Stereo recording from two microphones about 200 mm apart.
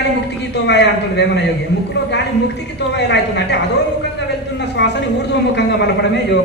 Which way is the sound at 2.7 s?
60° left (ahead or behind).